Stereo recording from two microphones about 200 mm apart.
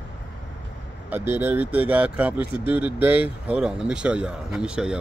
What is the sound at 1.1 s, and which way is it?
Speech, 10° right (ahead or behind).